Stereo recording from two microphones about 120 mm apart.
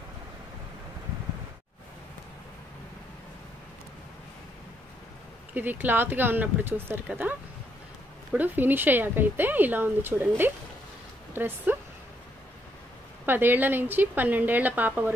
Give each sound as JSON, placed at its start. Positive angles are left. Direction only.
{"t": 5.5, "sound": "speech", "side_deg": -15}
{"t": 13.2, "sound": "speech", "side_deg": -15}